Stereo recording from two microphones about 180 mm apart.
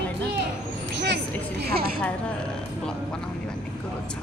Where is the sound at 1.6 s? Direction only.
60° right (ahead or behind).